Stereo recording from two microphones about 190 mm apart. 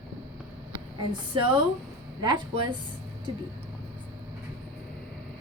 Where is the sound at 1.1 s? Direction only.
25° right (ahead or behind).